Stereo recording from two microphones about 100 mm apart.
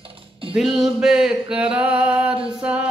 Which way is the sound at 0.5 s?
5° right (ahead or behind).